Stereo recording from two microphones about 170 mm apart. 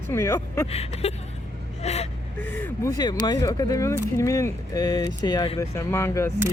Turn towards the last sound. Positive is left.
turn(degrees=15)  # may be behind; listen again after turning